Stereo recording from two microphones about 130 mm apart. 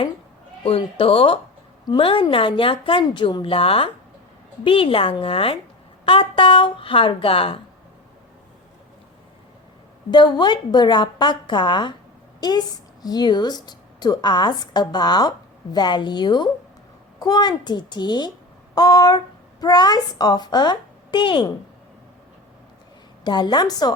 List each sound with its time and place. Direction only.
0.6 s a woman's voice: 45° left (ahead or behind)
10.1 s a woman's voice: 35° left (ahead or behind)
23.2 s a woman's voice: 35° left (ahead or behind)